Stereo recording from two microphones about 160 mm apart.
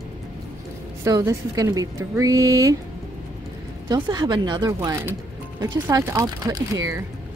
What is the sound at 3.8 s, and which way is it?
Speech, 30° right (ahead or behind).